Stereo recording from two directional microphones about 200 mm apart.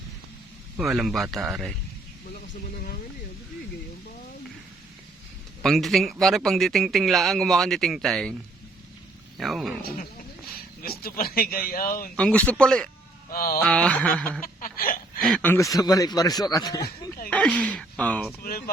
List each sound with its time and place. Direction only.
0.8 s speech: centre (ahead or behind)
5.6 s speech: centre (ahead or behind)
9.4 s speech: centre (ahead or behind)
9.8 s speech: 45° left (ahead or behind)
12.1 s speech: 5° left (ahead or behind)
13.3 s speech: 45° left (ahead or behind)
13.6 s speech: 5° left (ahead or behind)
14.4 s a sound: 45° left (ahead or behind)
15.2 s a man's voice: 5° left (ahead or behind)
17.2 s speech: 5° left (ahead or behind)
18.4 s speech: 45° left (ahead or behind)